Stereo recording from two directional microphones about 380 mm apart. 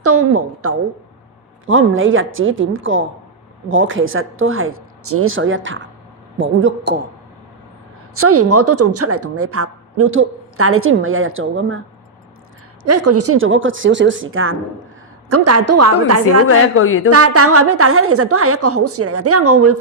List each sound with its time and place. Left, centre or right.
0.0 s a woman's voice: right
8.1 s a woman's voice: right
12.8 s a woman's voice: right
16.2 s a woman's voice: left
17.1 s a woman's voice: right